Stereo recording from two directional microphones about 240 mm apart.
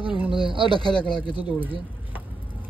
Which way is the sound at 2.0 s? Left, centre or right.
Centre.